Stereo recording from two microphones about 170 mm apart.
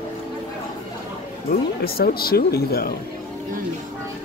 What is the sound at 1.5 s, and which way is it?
Speech, 65° left (ahead or behind).